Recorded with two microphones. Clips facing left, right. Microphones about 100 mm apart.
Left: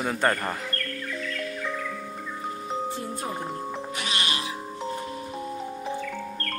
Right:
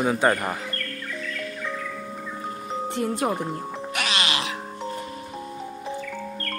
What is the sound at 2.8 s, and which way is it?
Music, 70° right (ahead or behind).